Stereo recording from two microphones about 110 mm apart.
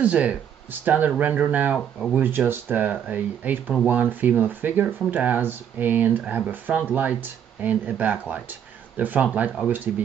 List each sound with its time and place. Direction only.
0.0 s speech: 10° right (ahead or behind)